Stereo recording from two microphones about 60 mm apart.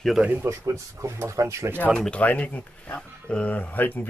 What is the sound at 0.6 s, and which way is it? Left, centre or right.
Speech, right.